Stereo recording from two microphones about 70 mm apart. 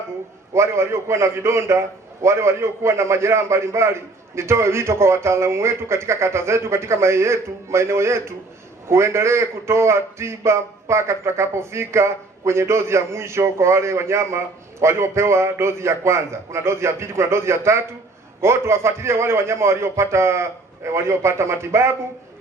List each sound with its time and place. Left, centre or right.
0.5 s a man's voice: right